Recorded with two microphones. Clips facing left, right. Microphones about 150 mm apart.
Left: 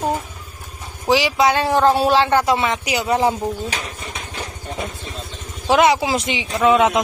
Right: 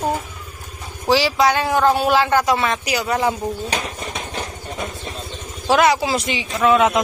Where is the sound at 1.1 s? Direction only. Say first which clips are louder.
Even; 15° left (ahead or behind).